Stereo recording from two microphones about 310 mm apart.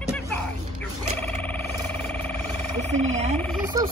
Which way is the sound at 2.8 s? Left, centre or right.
Right.